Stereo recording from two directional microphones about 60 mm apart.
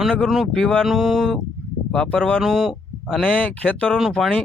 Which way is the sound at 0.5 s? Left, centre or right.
Centre.